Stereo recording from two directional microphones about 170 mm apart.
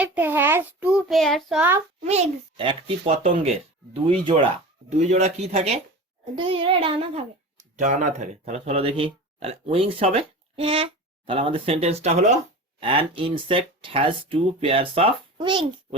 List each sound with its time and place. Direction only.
0.0 s a child's voice: 10° right (ahead or behind)
2.0 s a child's voice: 40° right (ahead or behind)
4.9 s a child's voice: 40° right (ahead or behind)
12.8 s a child's voice: 30° right (ahead or behind)